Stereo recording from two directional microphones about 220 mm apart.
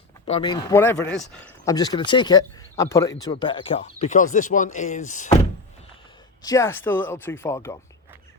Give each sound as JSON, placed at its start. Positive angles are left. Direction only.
{"t": 0.3, "sound": "speech", "side_deg": 25}
{"t": 0.8, "sound": "speech", "side_deg": 5}
{"t": 4.0, "sound": "speech", "side_deg": 35}
{"t": 6.4, "sound": "speech", "side_deg": 15}